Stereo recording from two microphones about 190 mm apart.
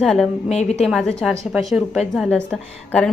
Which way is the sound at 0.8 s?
Centre (ahead or behind).